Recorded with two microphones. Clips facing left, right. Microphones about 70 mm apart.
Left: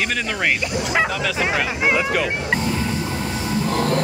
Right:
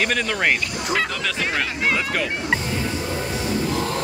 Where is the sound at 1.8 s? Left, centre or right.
Centre.